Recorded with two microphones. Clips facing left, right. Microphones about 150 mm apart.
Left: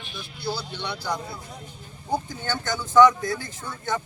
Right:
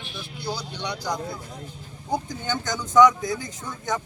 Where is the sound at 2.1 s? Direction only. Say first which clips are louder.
Even; 15° right (ahead or behind).